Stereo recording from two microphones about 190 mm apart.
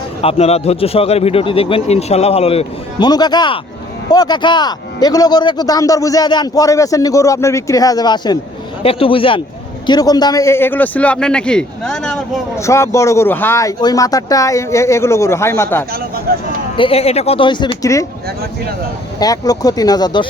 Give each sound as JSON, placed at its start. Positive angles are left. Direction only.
{"t": 0.2, "sound": "a man's voice", "side_deg": 30}
{"t": 12.5, "sound": "speech", "side_deg": 15}
{"t": 15.9, "sound": "speech", "side_deg": -50}
{"t": 16.7, "sound": "a man's voice", "side_deg": 30}
{"t": 19.2, "sound": "a man's voice", "side_deg": 20}